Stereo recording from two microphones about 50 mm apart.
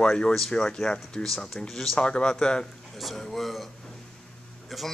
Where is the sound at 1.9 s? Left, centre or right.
Centre.